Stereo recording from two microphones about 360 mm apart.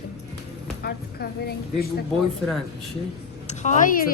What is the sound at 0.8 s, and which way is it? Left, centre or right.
A woman's voice, left.